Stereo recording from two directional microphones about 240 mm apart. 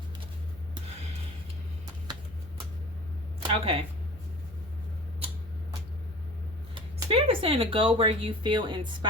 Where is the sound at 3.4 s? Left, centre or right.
Right.